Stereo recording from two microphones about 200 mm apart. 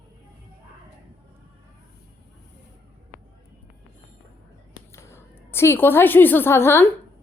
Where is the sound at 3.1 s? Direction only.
40° left (ahead or behind).